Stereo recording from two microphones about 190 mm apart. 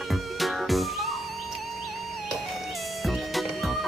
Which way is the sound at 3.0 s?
Centre (ahead or behind).